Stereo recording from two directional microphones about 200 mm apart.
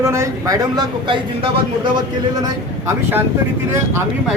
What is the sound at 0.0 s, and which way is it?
Speech, 15° right (ahead or behind).